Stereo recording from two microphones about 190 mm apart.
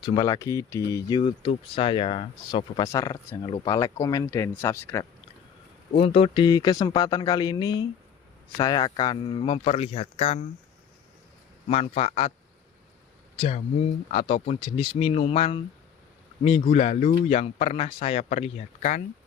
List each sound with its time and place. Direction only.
0.0 s speech: 20° left (ahead or behind)
6.0 s speech: 30° left (ahead or behind)
11.7 s speech: 35° left (ahead or behind)
13.4 s speech: 35° left (ahead or behind)